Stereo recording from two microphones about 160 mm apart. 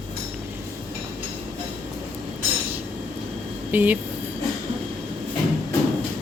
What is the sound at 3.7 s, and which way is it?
Speech, 10° right (ahead or behind).